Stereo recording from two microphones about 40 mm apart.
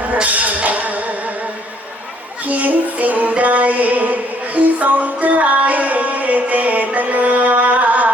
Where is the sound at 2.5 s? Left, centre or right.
Right.